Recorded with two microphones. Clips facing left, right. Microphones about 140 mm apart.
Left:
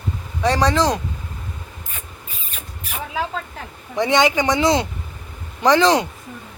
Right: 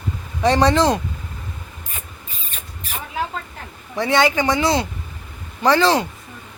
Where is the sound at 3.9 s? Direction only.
15° left (ahead or behind).